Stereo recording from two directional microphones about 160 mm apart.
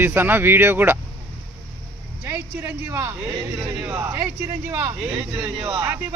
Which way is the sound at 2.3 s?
15° right (ahead or behind).